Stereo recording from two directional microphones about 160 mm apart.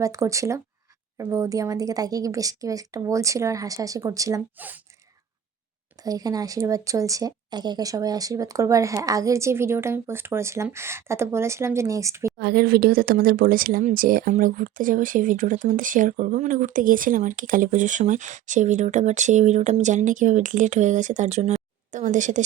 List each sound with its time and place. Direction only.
0.0 s speech: 20° right (ahead or behind)
6.0 s speech: 20° right (ahead or behind)
12.4 s a woman's voice: 85° right; by 22.4 s 50° right (ahead or behind)